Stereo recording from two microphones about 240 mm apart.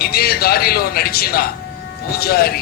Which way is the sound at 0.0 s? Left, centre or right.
Left.